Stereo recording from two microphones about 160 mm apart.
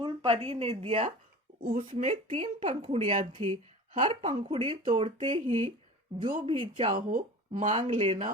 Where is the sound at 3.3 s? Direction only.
30° right (ahead or behind).